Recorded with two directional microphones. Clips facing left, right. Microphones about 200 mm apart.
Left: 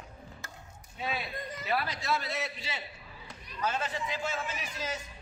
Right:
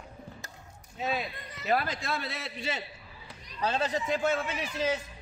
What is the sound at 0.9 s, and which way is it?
A man's voice, 45° right (ahead or behind).